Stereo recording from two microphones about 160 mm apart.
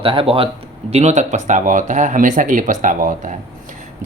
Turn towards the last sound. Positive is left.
turn(degrees=-55)  # may be behind; listen again after turning